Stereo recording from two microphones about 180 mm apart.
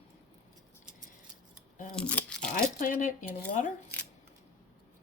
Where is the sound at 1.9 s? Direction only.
5° left (ahead or behind).